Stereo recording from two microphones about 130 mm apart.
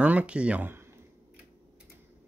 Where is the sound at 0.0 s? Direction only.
10° right (ahead or behind).